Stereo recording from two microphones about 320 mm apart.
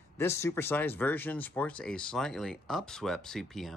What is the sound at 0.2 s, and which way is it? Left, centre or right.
Speech, centre.